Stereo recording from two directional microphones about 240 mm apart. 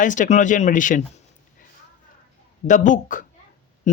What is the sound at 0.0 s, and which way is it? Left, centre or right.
Speech, left.